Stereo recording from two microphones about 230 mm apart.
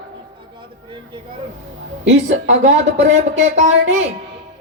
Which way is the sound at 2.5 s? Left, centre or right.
Right.